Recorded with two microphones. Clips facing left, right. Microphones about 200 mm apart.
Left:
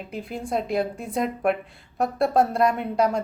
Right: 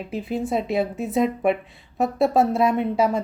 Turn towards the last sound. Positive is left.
turn(degrees=-5)  # may be behind; listen again after turning